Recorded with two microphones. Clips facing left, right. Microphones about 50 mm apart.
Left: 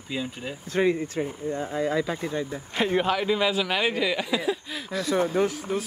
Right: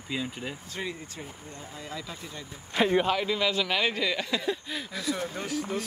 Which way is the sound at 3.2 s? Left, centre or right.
Centre.